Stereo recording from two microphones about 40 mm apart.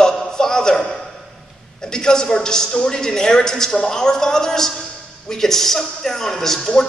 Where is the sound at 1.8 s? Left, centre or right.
Centre.